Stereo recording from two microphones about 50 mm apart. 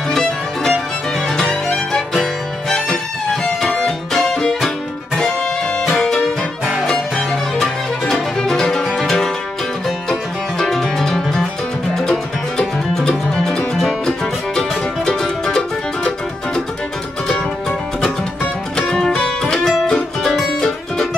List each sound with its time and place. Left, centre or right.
0.1 s music: centre
6.6 s music: centre
7.2 s music: centre
10.6 s music: centre
18.8 s music: centre
20.2 s music: centre